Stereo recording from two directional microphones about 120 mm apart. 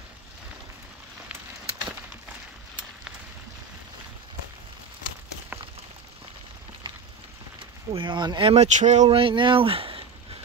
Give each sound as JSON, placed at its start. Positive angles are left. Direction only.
{"t": 7.9, "sound": "speech", "side_deg": -40}
{"t": 8.5, "sound": "speech", "side_deg": -80}
{"t": 9.1, "sound": "speech", "side_deg": -45}